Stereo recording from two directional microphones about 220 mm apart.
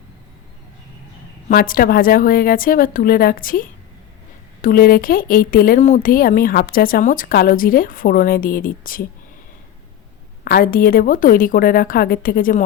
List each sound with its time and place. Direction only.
1.5 s speech: 40° left (ahead or behind)
10.4 s speech: 40° left (ahead or behind)